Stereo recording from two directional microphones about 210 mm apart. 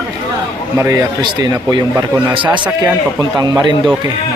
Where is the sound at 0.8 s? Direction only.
15° right (ahead or behind).